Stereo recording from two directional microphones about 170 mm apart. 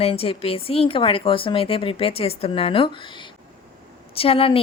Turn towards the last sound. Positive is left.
turn(degrees=35)  # may be behind; listen again after turning